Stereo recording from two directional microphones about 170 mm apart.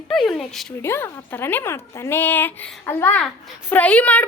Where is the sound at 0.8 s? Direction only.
15° left (ahead or behind).